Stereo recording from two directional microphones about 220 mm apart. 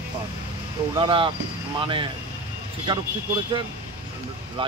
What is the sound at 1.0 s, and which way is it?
Speech, 20° right (ahead or behind).